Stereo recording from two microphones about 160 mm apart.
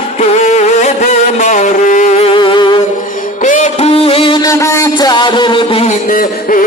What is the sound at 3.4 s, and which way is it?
Music, 50° left (ahead or behind).